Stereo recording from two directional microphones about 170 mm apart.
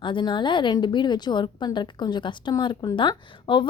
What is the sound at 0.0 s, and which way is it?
A woman's voice, 30° left (ahead or behind).